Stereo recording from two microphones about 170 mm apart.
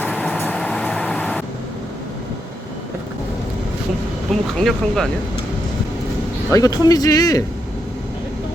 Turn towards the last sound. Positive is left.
turn(degrees=20)  # may be behind; listen again after turning